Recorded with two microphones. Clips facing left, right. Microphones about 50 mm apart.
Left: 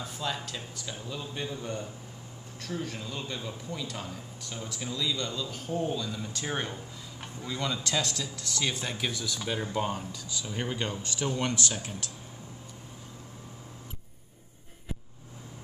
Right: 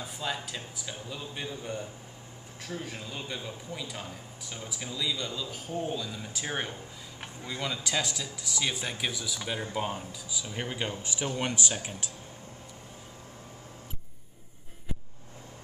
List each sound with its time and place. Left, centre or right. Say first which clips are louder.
0.0 s speech: even; centre